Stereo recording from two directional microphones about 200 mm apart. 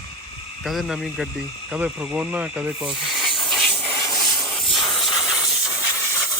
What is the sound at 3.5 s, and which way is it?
Hiss, centre (ahead or behind).